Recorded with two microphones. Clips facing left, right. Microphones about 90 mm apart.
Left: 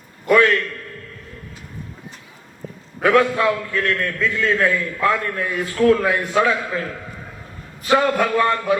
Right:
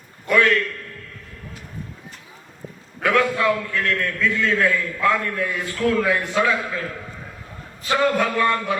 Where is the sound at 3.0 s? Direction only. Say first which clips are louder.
Left 3 dB; 35° left (ahead or behind).